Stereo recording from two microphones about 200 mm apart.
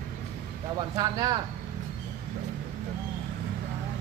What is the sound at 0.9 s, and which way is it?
Speech, 20° right (ahead or behind).